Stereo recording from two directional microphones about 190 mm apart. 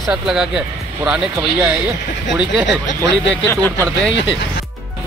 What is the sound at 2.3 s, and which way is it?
Speech, 5° right (ahead or behind).